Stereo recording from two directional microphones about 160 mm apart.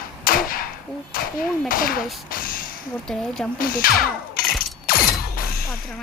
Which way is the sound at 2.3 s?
60° left (ahead or behind).